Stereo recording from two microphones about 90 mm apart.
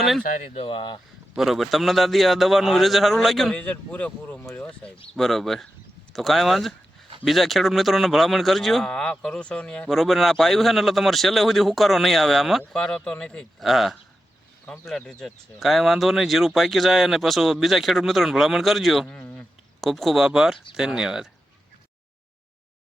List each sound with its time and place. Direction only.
0.6 s speech: 70° left (ahead or behind)
1.4 s speech: centre (ahead or behind)
3.5 s speech: 15° left (ahead or behind)
5.1 s speech: 5° left (ahead or behind)
13.7 s speech: centre (ahead or behind)
19.0 s a sound: 10° left (ahead or behind)
19.8 s speech: centre (ahead or behind)